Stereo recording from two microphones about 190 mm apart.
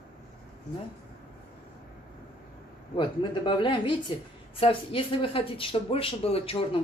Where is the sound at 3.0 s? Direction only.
25° left (ahead or behind).